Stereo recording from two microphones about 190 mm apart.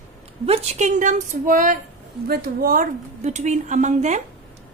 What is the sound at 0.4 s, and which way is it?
A woman's voice, 30° right (ahead or behind).